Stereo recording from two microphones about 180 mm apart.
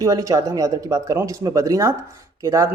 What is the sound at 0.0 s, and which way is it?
Speech, 20° right (ahead or behind).